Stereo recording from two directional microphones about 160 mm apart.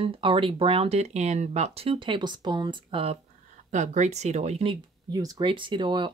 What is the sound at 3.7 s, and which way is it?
Speech, 50° right (ahead or behind).